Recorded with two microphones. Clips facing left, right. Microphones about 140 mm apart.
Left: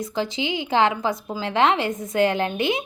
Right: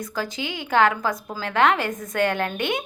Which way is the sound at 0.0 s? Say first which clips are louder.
Left 3 dB; 25° left (ahead or behind).